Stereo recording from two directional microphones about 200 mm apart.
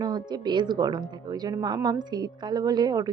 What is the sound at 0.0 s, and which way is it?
Speech, 20° right (ahead or behind).